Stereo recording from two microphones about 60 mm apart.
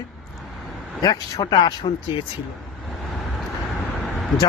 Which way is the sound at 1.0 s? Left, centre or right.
Left.